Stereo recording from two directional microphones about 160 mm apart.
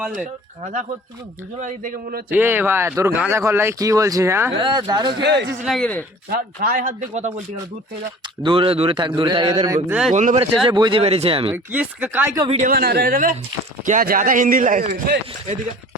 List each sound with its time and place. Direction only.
0.0 s speech: 5° right (ahead or behind)
0.6 s speech: 50° right (ahead or behind)
1.6 s speech: 60° right (ahead or behind)
2.3 s speech: 15° right (ahead or behind)
4.6 s speech: 25° right (ahead or behind)
5.2 s speech: 90° right
5.6 s speech: 5° left (ahead or behind)
6.3 s speech: 65° right (ahead or behind); by 7.3 s 45° right (ahead or behind)
8.4 s a man's voice: 35° right (ahead or behind)
10.1 s speech: 50° right (ahead or behind)
10.7 s speech: 30° right (ahead or behind)
11.0 s a man's voice: 40° right (ahead or behind)
11.5 s speech: 10° right (ahead or behind)
12.6 s speech: 75° right (ahead or behind)